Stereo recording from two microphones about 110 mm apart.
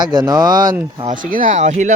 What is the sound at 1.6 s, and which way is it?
Speech, 90° right.